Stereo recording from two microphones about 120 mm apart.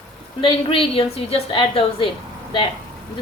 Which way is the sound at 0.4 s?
45° left (ahead or behind).